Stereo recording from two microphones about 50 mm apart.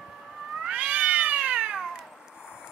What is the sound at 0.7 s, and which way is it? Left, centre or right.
Cat, right.